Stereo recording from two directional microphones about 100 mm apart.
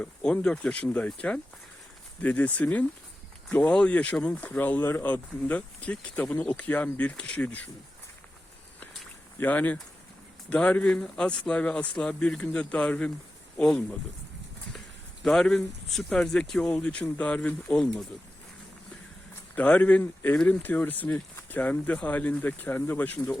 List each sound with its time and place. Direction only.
0.0 s speech: 10° left (ahead or behind)
9.4 s speech: 15° left (ahead or behind)
15.2 s speech: 5° left (ahead or behind)
19.5 s speech: 15° left (ahead or behind)